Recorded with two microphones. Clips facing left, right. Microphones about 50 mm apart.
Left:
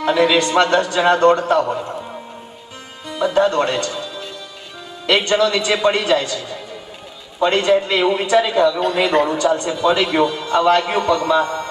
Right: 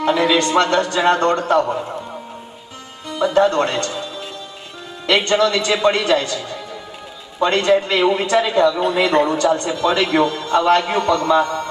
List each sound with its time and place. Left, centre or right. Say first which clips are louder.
0.0 s a sound: left 1 dB; centre
0.3 s a man's voice: left 1 dB; centre
3.1 s a man's voice: right 1 dB; centre
7.7 s a man's voice: even; centre
9.0 s a man's voice: even; centre
11.4 s a sound: right 1 dB; left